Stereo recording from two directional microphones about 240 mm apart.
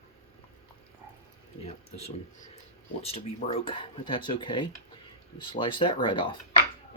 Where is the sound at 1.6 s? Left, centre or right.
Left.